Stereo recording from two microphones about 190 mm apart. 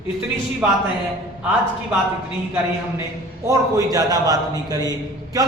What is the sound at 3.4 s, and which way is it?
A man's voice, 20° right (ahead or behind).